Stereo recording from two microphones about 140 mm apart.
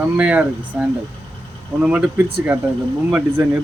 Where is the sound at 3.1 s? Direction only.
10° right (ahead or behind).